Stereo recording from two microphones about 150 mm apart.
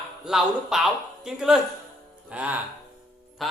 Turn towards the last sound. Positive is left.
turn(degrees=0)  # may be behind; listen again after turning